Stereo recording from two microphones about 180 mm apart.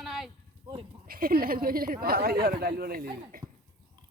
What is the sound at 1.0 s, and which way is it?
Speech, 55° right (ahead or behind).